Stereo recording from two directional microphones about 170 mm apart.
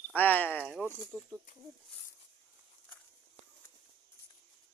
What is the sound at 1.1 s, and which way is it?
Speech, 5° left (ahead or behind).